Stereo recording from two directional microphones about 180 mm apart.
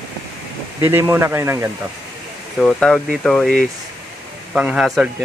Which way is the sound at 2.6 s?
5° left (ahead or behind).